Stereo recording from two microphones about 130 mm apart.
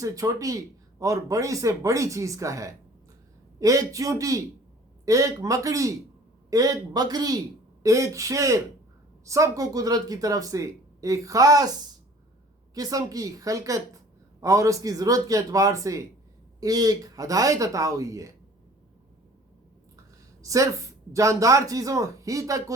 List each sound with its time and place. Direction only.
0.0 s a man's voice: 25° right (ahead or behind)
12.7 s a man's voice: 30° right (ahead or behind)
20.4 s a woman's voice: 25° right (ahead or behind)